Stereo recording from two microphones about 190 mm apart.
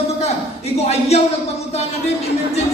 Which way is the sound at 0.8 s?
35° left (ahead or behind).